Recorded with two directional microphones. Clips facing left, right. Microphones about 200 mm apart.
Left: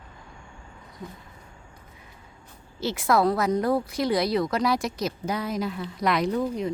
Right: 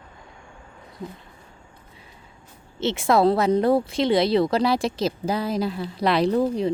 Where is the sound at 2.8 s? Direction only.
25° right (ahead or behind).